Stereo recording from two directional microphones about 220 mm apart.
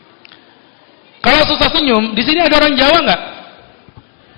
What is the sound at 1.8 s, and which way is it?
Speech, 20° left (ahead or behind).